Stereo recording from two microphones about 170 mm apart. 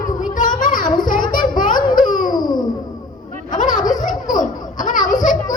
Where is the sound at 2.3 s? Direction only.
25° left (ahead or behind).